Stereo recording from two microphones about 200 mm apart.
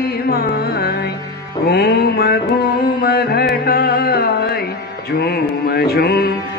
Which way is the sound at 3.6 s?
50° left (ahead or behind).